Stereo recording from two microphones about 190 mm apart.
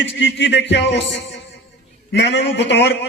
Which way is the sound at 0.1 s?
65° left (ahead or behind).